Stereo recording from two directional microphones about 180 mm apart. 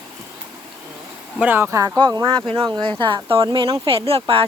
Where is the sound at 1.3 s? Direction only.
10° right (ahead or behind).